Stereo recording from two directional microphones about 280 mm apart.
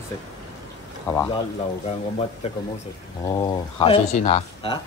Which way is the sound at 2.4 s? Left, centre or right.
Left.